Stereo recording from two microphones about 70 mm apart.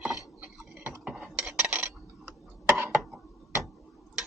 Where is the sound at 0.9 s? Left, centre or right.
Centre.